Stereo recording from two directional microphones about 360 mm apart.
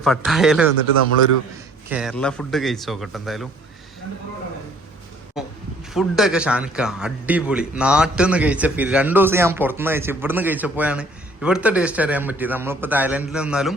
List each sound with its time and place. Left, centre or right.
0.0 s a man's voice: centre
1.9 s a man's voice: centre
5.4 s a sound: centre
5.9 s a man's voice: centre